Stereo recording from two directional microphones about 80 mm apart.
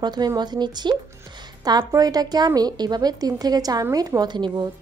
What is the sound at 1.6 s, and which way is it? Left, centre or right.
A woman's voice, right.